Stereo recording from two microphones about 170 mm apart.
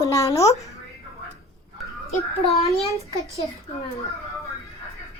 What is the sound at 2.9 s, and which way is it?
Speech, 20° left (ahead or behind).